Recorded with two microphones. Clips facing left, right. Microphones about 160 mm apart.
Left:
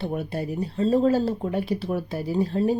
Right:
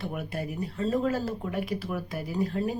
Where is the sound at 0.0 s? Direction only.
30° left (ahead or behind).